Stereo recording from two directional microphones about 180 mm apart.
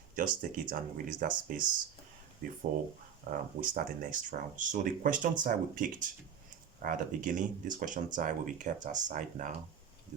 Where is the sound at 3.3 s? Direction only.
55° right (ahead or behind).